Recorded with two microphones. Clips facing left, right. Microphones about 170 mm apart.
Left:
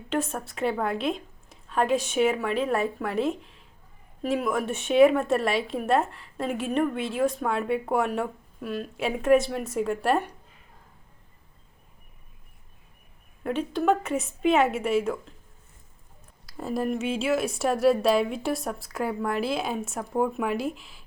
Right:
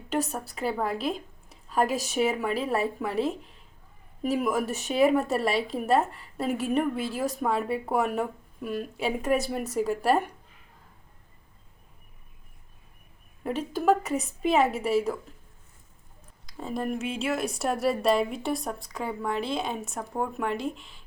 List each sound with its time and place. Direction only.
0.3 s a woman's voice: centre (ahead or behind)
1.6 s a sound: 5° right (ahead or behind)
2.0 s a woman's voice: centre (ahead or behind)
13.7 s a woman's voice: centre (ahead or behind)
16.5 s a woman's voice: 5° left (ahead or behind)